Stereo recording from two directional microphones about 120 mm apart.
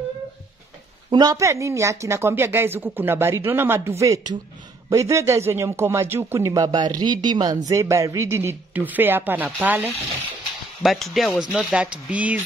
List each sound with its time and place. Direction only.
1.1 s speech: 30° right (ahead or behind)
4.0 s speech: 30° right (ahead or behind); by 9.9 s 15° right (ahead or behind)
10.8 s speech: centre (ahead or behind)